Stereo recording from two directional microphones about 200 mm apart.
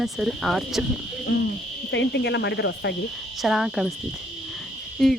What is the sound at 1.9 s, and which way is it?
Speech, 60° left (ahead or behind).